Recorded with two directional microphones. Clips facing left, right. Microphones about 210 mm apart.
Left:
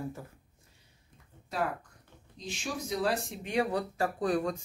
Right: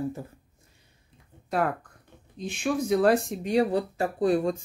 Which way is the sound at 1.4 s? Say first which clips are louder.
Right 6 dB; 55° right (ahead or behind).